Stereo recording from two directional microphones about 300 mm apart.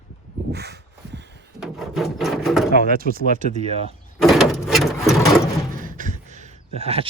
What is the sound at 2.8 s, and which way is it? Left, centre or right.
Speech, right.